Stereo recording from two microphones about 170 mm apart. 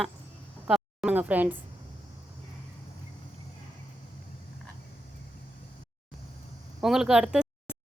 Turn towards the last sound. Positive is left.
turn(degrees=-5)  # may be behind; listen again after turning